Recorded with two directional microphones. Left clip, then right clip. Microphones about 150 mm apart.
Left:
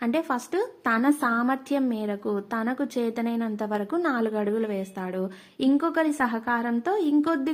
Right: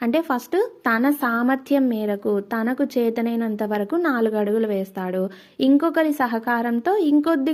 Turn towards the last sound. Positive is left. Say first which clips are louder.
# right 5 dB
turn(degrees=-35)  # may be behind; listen again after turning